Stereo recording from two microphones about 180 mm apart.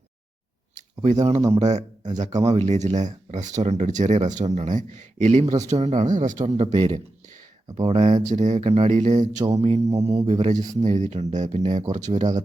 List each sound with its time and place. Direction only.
1.4 s speech: 15° right (ahead or behind)
2.1 s speech: 40° right (ahead or behind)